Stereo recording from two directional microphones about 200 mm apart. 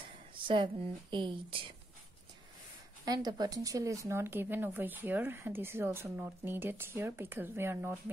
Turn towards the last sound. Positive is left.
turn(degrees=-10)  # may be behind; listen again after turning